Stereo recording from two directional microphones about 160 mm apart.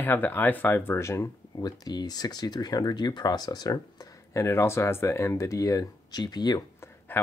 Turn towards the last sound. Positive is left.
turn(degrees=25)  # may be behind; listen again after turning